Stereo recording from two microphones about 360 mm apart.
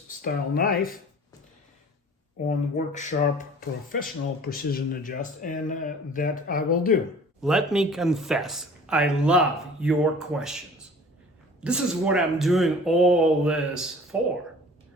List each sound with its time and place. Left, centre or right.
0.2 s speech: left
2.5 s speech: centre
7.4 s speech: centre
11.6 s speech: centre